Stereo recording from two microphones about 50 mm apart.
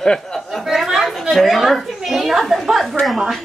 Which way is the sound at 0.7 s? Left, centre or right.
Centre.